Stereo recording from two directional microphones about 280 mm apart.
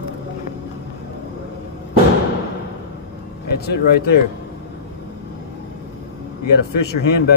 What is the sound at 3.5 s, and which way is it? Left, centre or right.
Speech, left.